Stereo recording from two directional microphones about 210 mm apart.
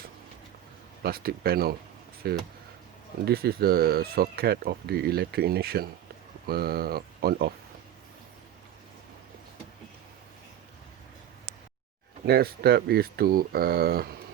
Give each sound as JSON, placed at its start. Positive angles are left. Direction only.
{"t": 1.0, "sound": "speech", "side_deg": -45}
{"t": 12.2, "sound": "speech", "side_deg": -50}